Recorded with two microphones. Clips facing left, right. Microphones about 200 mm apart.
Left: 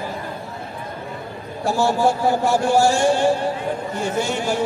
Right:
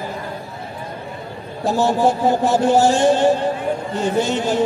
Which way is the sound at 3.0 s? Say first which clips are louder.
Right 3 dB; 10° left (ahead or behind).